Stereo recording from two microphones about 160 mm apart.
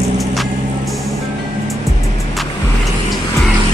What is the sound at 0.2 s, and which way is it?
Vehicle, centre (ahead or behind).